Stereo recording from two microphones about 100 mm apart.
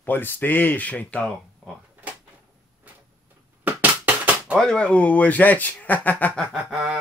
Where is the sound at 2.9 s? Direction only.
15° right (ahead or behind).